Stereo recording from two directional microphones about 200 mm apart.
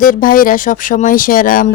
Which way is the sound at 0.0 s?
45° left (ahead or behind).